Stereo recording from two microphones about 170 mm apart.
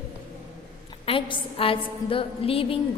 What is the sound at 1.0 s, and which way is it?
A woman's voice, 30° left (ahead or behind).